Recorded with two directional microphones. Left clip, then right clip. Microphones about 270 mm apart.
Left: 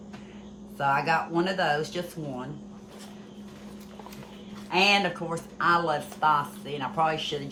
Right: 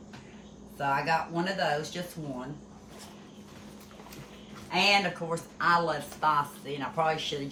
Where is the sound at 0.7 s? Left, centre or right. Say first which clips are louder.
Left 3 dB; centre.